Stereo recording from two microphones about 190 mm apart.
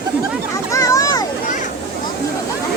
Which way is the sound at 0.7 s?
15° left (ahead or behind).